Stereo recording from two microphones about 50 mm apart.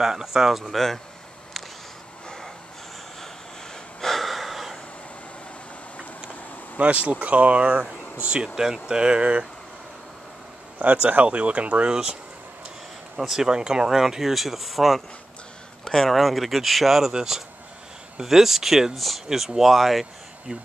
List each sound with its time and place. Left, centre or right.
0.0 s speech: centre
2.2 s vehicle: centre
4.0 s snort: centre
6.8 s speech: right
10.8 s speech: right
13.2 s speech: centre